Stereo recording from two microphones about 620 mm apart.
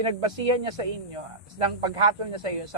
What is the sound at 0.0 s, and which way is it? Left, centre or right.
Speech, right.